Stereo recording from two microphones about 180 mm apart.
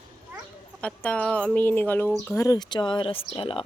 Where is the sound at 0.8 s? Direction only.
5° left (ahead or behind).